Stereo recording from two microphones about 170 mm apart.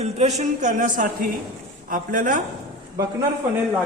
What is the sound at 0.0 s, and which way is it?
A woman's voice, 40° right (ahead or behind).